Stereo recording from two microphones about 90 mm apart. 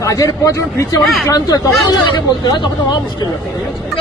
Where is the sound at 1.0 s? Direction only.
Centre (ahead or behind).